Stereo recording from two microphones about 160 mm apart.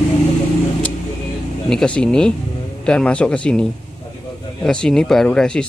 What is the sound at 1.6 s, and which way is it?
Speech, 5° left (ahead or behind).